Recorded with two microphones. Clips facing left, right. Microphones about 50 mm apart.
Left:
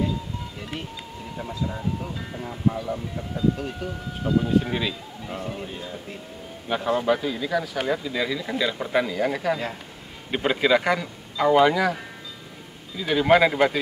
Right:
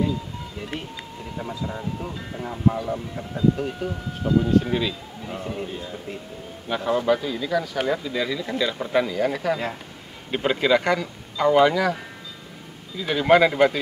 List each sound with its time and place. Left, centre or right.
1.4 s a man's voice: centre